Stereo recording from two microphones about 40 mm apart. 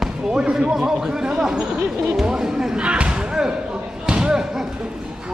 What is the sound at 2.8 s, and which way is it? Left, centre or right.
Speech, right.